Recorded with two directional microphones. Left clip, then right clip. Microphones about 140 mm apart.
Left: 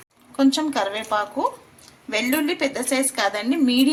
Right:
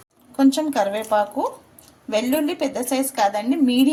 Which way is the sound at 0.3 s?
55° right (ahead or behind).